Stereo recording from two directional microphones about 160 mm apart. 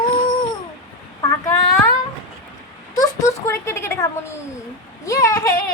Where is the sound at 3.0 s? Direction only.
20° left (ahead or behind).